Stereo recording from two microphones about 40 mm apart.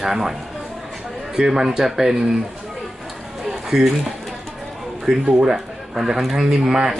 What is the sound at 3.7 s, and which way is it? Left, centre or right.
Speech, centre.